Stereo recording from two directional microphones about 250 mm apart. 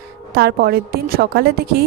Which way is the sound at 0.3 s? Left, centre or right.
Right.